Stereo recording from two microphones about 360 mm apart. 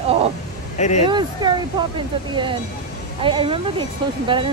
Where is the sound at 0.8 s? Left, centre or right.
Centre.